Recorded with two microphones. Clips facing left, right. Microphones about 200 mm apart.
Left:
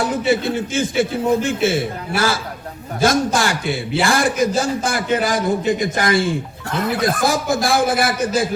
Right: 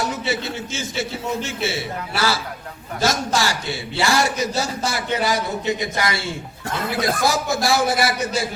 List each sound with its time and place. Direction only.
0.3 s a man's voice: 55° left (ahead or behind)
6.9 s a man's voice: centre (ahead or behind)
7.5 s a man's voice: 50° left (ahead or behind)